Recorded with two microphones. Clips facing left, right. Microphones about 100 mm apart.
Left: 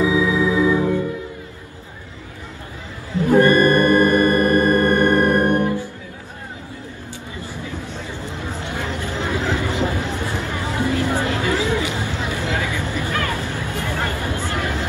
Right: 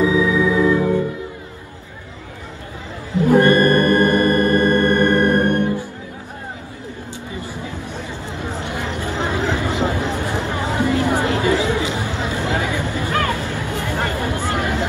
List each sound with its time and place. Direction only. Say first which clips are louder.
0.0 s organ: right 2 dB; 15° left (ahead or behind)
3.2 s music: right 1 dB; 20° right (ahead or behind)
3.5 s organ: even; 15° left (ahead or behind)
7.3 s a sound: right 1 dB; 15° right (ahead or behind)